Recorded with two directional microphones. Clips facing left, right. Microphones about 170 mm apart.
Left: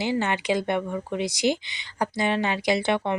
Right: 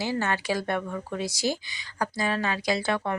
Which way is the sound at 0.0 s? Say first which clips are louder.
Left 3 dB; 20° left (ahead or behind).